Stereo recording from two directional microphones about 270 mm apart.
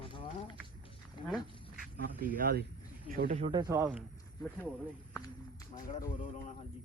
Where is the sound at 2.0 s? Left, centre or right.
Right; by 4.0 s centre.